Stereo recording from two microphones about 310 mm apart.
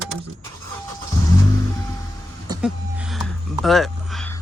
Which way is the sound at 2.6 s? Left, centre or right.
Centre.